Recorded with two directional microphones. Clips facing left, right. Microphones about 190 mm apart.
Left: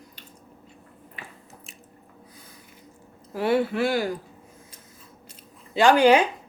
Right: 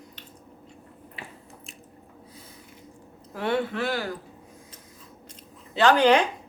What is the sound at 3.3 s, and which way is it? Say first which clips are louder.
Speech: left 4 dB; 10° left (ahead or behind).